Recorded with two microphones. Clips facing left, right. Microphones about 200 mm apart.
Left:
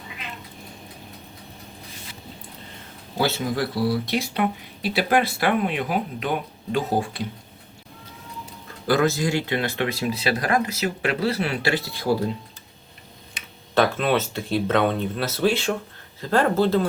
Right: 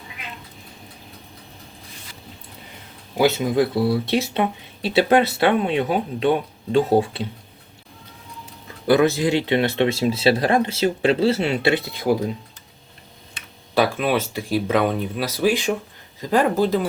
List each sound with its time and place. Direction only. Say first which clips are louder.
3.2 s speech: right 6 dB; 20° right (ahead or behind)
8.9 s speech: right 4 dB; 20° right (ahead or behind)
13.7 s speech: right 1 dB; 10° right (ahead or behind)